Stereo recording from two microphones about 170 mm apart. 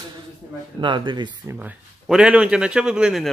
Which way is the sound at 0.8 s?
30° right (ahead or behind).